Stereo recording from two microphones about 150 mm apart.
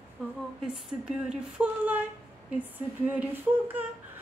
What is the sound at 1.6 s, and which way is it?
Speech, 10° right (ahead or behind).